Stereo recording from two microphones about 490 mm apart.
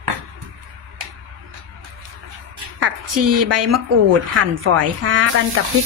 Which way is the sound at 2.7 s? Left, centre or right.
Right.